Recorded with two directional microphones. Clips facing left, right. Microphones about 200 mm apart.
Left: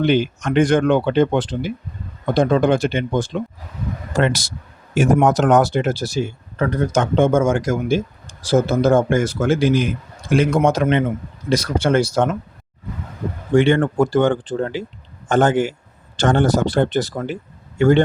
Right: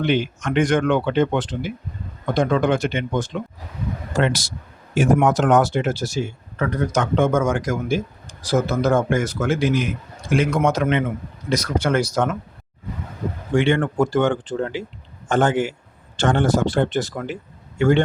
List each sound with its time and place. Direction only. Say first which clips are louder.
0.0 s speech: left 4 dB; 35° left (ahead or behind)
4.2 s speech: left 2 dB; 50° left (ahead or behind)
4.9 s speech: left 2 dB; 40° left (ahead or behind)
13.6 s a man's voice: left 3 dB; 40° left (ahead or behind)